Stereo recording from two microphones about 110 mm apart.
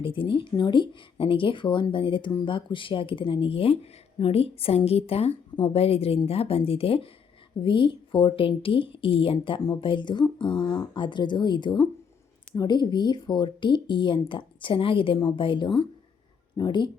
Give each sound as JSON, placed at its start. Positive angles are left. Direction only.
{"t": 0.0, "sound": "speech", "side_deg": 50}
{"t": 7.6, "sound": "speech", "side_deg": 50}